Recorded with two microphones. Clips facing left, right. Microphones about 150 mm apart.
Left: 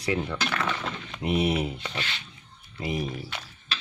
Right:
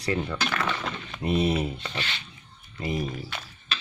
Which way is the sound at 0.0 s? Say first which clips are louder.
Even; centre (ahead or behind).